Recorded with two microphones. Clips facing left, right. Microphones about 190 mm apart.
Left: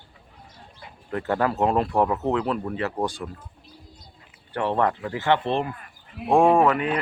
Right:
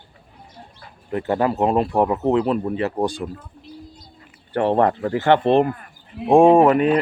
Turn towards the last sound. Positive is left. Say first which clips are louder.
# right 6 dB
turn(degrees=-35)  # may be behind; listen again after turning